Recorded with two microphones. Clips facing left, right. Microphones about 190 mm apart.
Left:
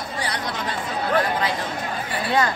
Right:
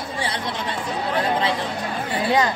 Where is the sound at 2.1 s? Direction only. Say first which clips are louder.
Right 2 dB; 20° right (ahead or behind).